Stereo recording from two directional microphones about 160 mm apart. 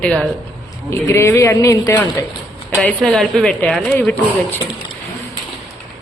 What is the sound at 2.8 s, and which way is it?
Speech, 5° left (ahead or behind).